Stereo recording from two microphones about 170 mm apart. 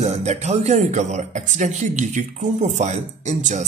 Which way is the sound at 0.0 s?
40° right (ahead or behind).